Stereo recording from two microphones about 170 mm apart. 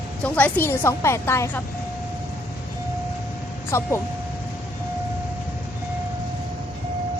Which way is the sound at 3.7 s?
15° left (ahead or behind).